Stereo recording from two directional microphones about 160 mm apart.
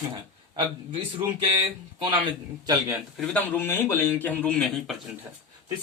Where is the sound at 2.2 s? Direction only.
25° right (ahead or behind).